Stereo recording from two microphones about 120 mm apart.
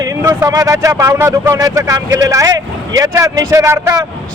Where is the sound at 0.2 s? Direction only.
25° right (ahead or behind).